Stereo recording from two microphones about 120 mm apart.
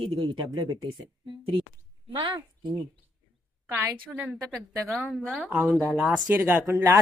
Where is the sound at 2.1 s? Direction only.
40° right (ahead or behind).